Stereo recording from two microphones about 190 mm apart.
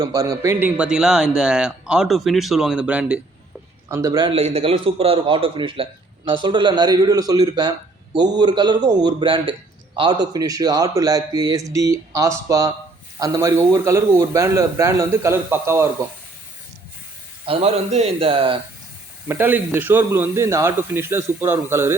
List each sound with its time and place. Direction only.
0.0 s a man's voice: 20° right (ahead or behind)
4.3 s a man's voice: 30° right (ahead or behind); by 16.0 s 15° right (ahead or behind)
17.4 s a man's voice: 30° right (ahead or behind)
19.3 s a man's voice: 10° right (ahead or behind)